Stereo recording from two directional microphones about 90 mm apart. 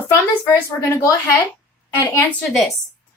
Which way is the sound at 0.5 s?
30° left (ahead or behind).